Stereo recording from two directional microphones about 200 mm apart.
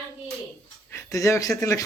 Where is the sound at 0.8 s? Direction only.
15° left (ahead or behind).